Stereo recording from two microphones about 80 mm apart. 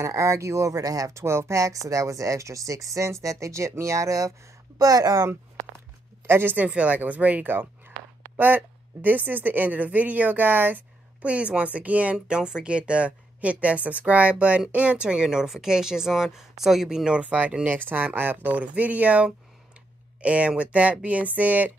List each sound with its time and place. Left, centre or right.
0.0 s speech: right
6.2 s a woman's voice: right